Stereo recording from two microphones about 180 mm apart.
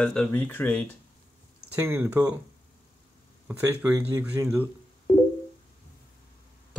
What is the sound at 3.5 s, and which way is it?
Speech, 10° right (ahead or behind).